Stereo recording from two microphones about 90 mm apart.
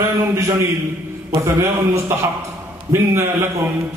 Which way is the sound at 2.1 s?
30° right (ahead or behind).